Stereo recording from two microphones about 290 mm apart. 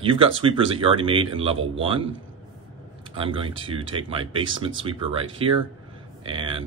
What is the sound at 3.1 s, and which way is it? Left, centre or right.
Speech, centre.